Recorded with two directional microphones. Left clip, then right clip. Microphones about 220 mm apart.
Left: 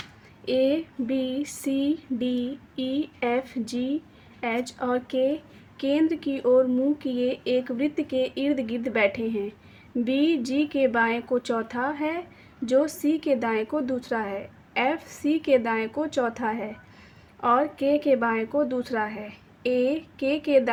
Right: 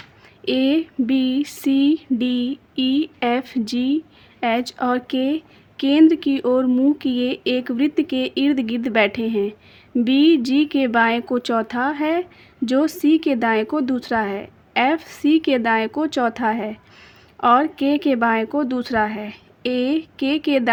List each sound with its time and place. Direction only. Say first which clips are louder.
0.4 s a woman's voice: right 4 dB; 45° right (ahead or behind)